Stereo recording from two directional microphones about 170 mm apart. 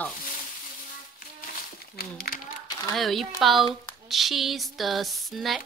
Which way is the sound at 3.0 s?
Centre (ahead or behind).